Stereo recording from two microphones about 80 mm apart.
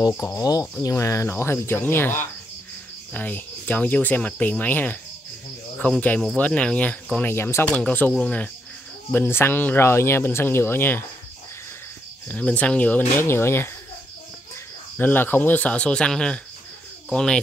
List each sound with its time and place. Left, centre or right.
0.4 s speech: left
0.8 s speech: left; by 8.5 s centre
9.1 s speech: left
12.3 s speech: centre
13.2 s speech: left
15.0 s speech: left